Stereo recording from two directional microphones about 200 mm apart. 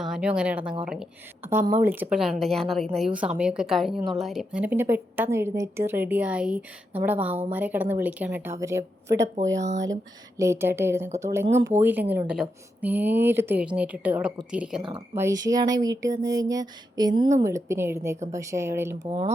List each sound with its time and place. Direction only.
0.0 s a woman's voice: 5° right (ahead or behind)
14.8 s a woman's voice: 20° right (ahead or behind)